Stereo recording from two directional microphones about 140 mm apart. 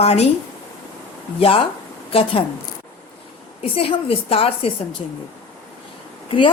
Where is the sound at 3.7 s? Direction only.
40° left (ahead or behind).